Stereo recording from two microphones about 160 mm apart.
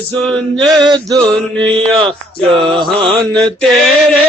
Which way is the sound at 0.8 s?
25° right (ahead or behind).